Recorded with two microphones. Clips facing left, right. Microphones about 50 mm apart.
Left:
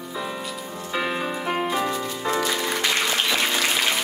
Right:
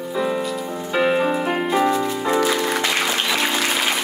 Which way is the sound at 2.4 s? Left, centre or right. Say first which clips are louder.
Right 4 dB; centre.